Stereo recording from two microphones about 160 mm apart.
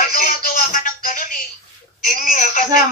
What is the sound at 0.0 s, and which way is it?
Music, 55° left (ahead or behind).